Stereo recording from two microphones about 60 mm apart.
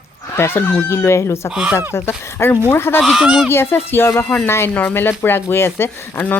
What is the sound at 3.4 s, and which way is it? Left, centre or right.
Speech, left.